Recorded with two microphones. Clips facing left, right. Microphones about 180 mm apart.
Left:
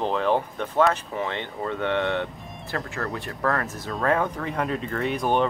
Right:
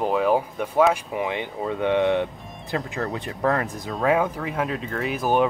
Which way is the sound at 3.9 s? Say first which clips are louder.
Right 2 dB; 10° right (ahead or behind).